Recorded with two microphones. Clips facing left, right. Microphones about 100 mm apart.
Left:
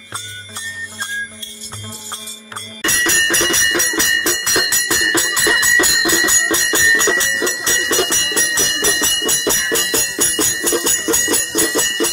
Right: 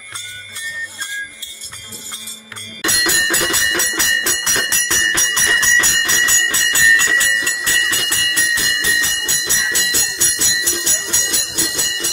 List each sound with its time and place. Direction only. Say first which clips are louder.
2.8 s music: left 1 dB; 10° right (ahead or behind); by 12.1 s 55° left (ahead or behind)